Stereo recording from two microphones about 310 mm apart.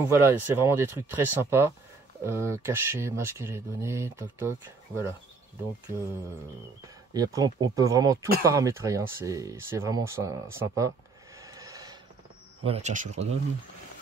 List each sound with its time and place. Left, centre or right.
0.0 s speech: centre
7.2 s speech: centre
11.3 s train: centre
12.6 s speech: right